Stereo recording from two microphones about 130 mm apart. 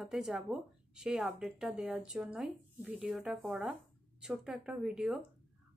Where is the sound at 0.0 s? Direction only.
5° right (ahead or behind).